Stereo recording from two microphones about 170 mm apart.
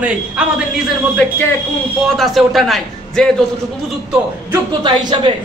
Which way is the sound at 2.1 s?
Centre (ahead or behind).